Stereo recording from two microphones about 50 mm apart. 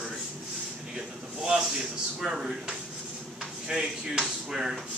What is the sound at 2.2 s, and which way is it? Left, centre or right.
Speech, centre.